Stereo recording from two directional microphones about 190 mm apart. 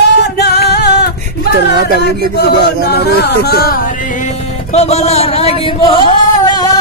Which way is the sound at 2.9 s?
55° left (ahead or behind).